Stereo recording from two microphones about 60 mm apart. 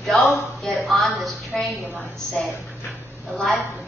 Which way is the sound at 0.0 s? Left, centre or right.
Centre.